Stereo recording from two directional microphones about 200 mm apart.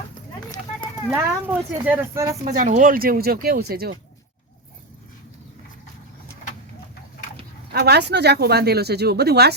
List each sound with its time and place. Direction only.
1.1 s speech: 10° right (ahead or behind)
2.6 s speech: 40° right (ahead or behind)
7.7 s speech: 55° right (ahead or behind)